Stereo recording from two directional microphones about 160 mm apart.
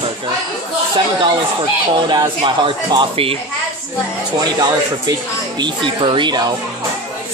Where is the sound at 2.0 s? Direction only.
25° right (ahead or behind).